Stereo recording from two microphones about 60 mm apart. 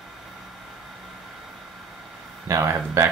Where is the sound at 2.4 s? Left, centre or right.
Right.